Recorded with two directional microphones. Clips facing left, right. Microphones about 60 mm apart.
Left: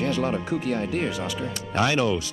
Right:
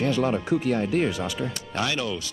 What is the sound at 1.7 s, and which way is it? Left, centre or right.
Speech, left.